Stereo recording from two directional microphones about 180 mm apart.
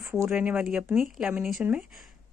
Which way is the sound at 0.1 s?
5° right (ahead or behind).